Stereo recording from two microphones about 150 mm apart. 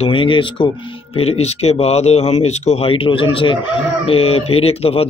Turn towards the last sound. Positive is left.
turn(degrees=40)  # may be behind; listen again after turning